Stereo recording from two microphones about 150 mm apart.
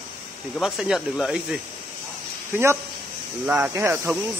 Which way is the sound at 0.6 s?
Centre (ahead or behind).